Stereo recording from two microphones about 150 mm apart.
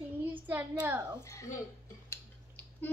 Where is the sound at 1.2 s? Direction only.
20° left (ahead or behind).